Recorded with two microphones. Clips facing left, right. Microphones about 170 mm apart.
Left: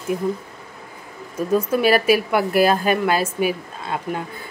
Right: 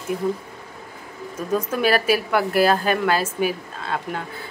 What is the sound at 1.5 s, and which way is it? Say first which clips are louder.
A woman's voice: left 3 dB; 10° left (ahead or behind).